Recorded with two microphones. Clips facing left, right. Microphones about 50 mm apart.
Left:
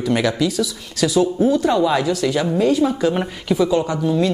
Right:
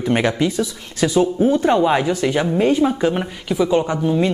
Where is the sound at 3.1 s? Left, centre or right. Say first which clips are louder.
Left 1 dB; centre.